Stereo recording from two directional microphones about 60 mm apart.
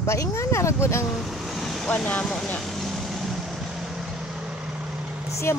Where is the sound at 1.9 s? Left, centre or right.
Left.